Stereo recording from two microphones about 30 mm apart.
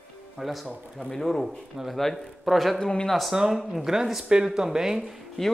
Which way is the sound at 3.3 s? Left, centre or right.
Centre.